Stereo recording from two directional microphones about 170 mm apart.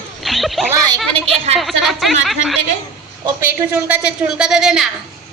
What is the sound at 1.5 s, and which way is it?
A woman's voice, centre (ahead or behind).